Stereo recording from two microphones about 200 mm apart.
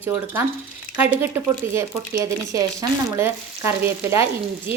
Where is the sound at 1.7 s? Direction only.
15° right (ahead or behind).